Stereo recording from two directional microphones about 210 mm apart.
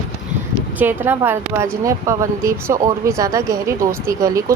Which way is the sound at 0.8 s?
10° right (ahead or behind).